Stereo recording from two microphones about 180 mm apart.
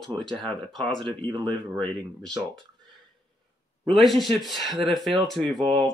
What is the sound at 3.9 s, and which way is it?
Speech, centre (ahead or behind).